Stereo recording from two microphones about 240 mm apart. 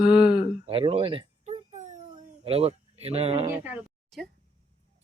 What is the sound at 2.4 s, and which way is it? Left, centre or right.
Speech, right.